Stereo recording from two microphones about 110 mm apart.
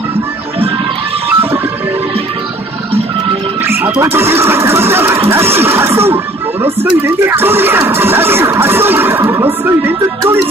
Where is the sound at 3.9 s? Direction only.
20° right (ahead or behind).